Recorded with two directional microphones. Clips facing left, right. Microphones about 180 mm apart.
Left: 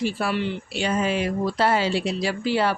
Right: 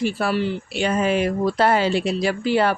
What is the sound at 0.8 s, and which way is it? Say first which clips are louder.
Speech: right 3 dB; 55° right (ahead or behind).